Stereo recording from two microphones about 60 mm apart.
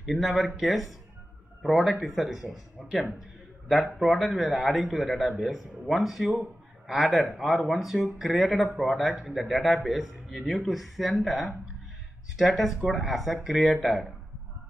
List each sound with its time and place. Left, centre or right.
0.0 s speech: centre
3.6 s speech: centre
9.1 s speech: centre
9.4 s speech: centre